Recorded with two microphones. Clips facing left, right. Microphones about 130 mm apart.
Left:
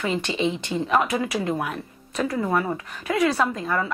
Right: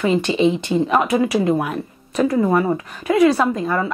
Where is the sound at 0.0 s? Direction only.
15° right (ahead or behind).